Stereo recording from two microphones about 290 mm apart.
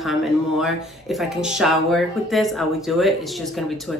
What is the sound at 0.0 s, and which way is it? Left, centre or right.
Speech, centre.